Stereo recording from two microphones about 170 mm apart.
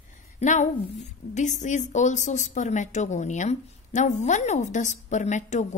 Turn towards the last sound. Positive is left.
turn(degrees=45)  # may be behind; listen again after turning